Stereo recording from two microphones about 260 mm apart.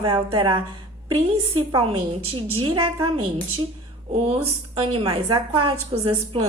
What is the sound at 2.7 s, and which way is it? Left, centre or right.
Speech, centre.